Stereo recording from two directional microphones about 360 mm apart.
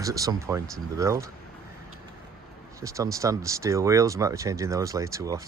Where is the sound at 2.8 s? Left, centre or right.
Centre.